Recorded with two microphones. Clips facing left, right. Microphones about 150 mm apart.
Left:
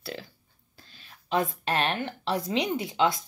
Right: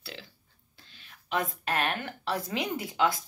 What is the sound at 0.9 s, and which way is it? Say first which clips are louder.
A woman's voice: left 4 dB; 35° left (ahead or behind).